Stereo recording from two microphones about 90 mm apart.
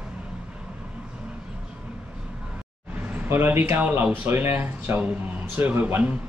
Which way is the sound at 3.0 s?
20° right (ahead or behind).